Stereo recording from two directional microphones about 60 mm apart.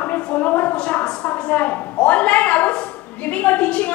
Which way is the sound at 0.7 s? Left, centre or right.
Centre.